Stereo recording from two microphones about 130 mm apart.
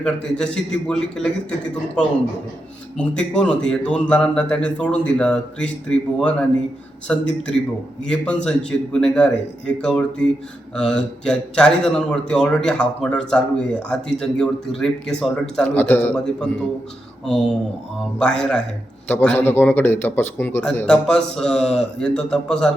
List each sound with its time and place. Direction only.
0.0 s speech: 5° left (ahead or behind)
3.0 s a man's voice: 10° left (ahead or behind)
15.7 s a man's voice: 15° left (ahead or behind)
20.8 s a man's voice: 5° left (ahead or behind)